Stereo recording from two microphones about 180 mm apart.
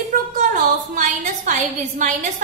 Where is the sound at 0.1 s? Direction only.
45° right (ahead or behind).